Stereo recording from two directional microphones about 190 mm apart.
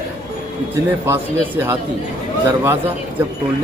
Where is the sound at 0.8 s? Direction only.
15° right (ahead or behind).